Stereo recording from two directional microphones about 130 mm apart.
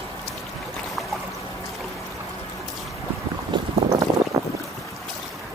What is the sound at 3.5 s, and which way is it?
Boat, 35° right (ahead or behind).